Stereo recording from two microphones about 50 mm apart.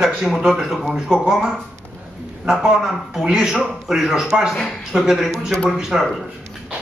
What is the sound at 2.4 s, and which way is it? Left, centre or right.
A man's voice, centre.